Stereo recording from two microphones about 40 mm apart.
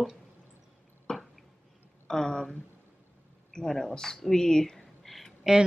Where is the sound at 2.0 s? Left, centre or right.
Centre.